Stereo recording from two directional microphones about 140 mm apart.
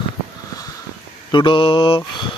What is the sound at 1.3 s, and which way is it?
Mantra, 35° left (ahead or behind).